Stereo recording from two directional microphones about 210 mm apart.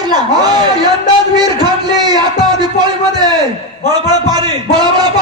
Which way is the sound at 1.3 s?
20° right (ahead or behind).